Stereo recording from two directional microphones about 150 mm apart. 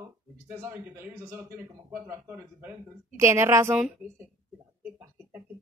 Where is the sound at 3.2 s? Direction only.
20° right (ahead or behind).